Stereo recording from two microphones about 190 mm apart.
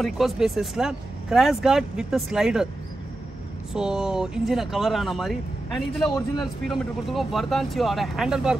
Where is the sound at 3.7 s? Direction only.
5° right (ahead or behind).